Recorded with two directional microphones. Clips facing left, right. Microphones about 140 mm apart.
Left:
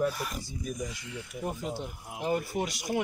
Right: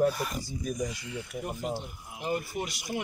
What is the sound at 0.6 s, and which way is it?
Speech, 45° right (ahead or behind).